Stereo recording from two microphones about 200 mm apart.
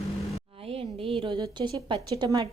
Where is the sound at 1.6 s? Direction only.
25° right (ahead or behind).